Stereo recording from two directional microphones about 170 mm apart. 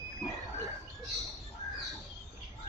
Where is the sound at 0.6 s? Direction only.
Centre (ahead or behind).